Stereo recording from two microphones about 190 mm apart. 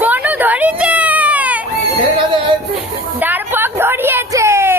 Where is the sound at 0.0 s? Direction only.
10° right (ahead or behind).